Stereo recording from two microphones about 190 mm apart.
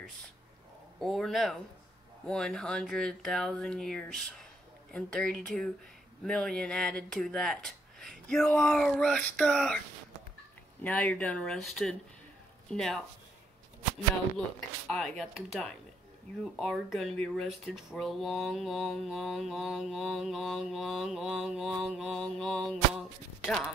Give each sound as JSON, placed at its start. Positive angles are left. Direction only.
{"t": 0.9, "sound": "speech", "side_deg": 0}
{"t": 10.8, "sound": "speech", "side_deg": 5}
{"t": 14.9, "sound": "speech", "side_deg": 0}